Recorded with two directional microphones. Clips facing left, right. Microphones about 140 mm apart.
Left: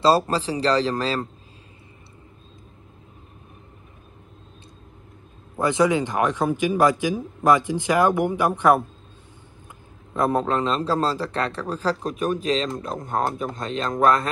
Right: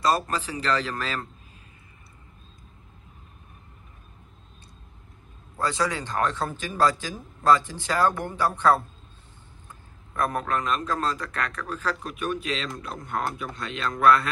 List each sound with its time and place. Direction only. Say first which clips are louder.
0.0 s a man's voice: left 6 dB; 30° left (ahead or behind)
5.6 s speech: left 7 dB; 20° left (ahead or behind)
10.1 s a man's voice: left 5 dB; 25° left (ahead or behind); by 13.9 s 40° left (ahead or behind)